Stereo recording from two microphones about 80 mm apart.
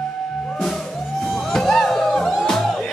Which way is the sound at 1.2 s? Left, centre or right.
Centre.